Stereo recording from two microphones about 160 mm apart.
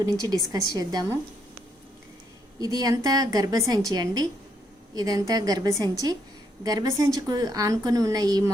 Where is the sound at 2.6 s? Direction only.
20° right (ahead or behind).